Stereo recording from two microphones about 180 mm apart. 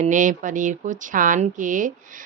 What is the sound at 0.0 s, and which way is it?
Speech, 45° right (ahead or behind).